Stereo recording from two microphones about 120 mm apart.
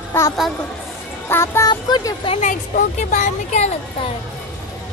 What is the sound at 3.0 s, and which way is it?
Speech, 80° left.